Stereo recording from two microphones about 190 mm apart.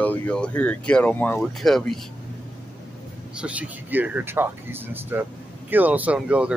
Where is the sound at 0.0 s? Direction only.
5° left (ahead or behind).